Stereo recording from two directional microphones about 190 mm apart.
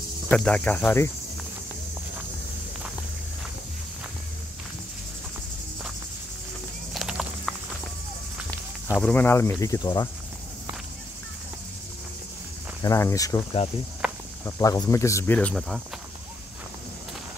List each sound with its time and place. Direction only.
0.3 s speech: 5° left (ahead or behind)
6.9 s clip-clop: centre (ahead or behind)
8.9 s speech: 5° left (ahead or behind)
12.8 s speech: 15° left (ahead or behind)
14.0 s cricket: 5° right (ahead or behind)
14.4 s speech: 20° left (ahead or behind)